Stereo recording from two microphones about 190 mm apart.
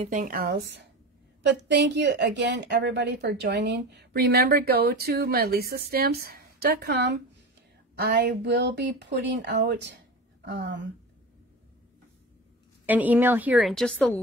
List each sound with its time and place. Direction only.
0.0 s a woman's voice: 45° right (ahead or behind)
8.2 s a woman's voice: 60° right (ahead or behind)
12.8 s a woman's voice: 10° right (ahead or behind); by 14.2 s 5° left (ahead or behind)